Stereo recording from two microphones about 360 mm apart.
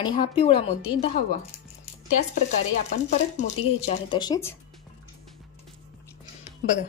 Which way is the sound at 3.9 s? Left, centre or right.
Centre.